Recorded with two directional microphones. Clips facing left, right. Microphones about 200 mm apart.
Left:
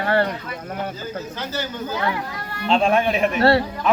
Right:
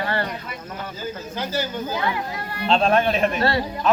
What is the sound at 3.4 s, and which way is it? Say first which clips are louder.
Speech: left 5 dB; 65° left (ahead or behind).